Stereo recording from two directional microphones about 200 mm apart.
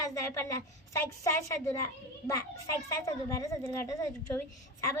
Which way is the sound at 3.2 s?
15° left (ahead or behind).